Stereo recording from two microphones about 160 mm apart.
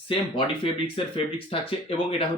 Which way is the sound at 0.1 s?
35° left (ahead or behind).